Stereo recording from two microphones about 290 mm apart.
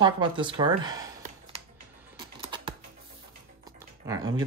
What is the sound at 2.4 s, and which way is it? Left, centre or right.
Typing, centre.